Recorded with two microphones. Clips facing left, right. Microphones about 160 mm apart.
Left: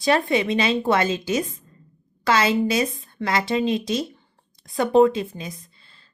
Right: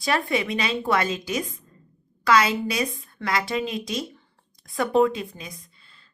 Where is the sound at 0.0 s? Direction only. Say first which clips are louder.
Left 4 dB; 25° left (ahead or behind).